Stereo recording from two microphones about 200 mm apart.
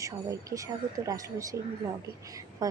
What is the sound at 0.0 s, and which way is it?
A woman's voice, 15° right (ahead or behind).